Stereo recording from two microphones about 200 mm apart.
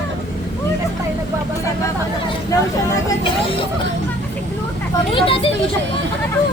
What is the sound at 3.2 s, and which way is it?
Speech, 25° left (ahead or behind).